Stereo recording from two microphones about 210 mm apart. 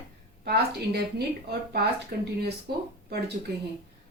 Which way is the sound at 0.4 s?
50° right (ahead or behind).